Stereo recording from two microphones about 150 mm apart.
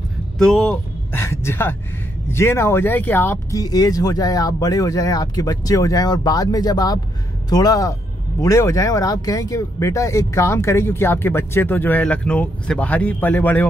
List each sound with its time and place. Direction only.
0.4 s speech: 5° left (ahead or behind)
1.1 s speech: 15° left (ahead or behind)